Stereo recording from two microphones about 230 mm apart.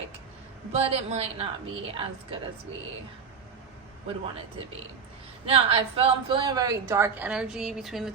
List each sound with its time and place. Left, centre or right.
0.7 s a woman's voice: right
5.5 s a woman's voice: right; by 8.1 s centre